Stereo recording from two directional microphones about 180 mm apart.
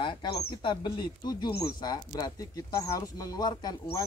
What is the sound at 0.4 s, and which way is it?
Speech, 30° left (ahead or behind).